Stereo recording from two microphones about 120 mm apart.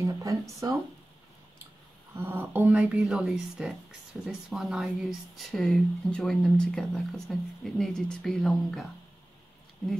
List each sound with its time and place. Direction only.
0.0 s speech: 25° right (ahead or behind)
2.1 s speech: 20° right (ahead or behind)
2.7 s speech: 5° right (ahead or behind)